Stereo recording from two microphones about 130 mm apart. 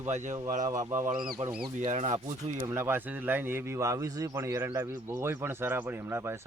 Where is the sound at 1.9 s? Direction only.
60° right (ahead or behind).